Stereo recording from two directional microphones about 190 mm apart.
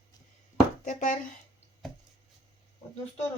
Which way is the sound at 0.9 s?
40° left (ahead or behind).